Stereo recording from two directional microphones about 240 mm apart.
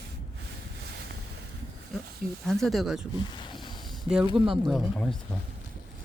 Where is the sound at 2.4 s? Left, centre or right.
Centre.